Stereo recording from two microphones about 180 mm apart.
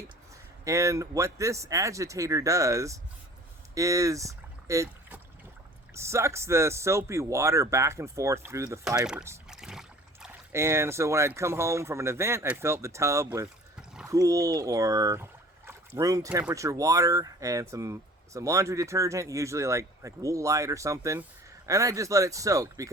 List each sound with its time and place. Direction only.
0.6 s speech: 15° right (ahead or behind)
9.5 s boat: 5° right (ahead or behind)
10.5 s speech: 15° right (ahead or behind)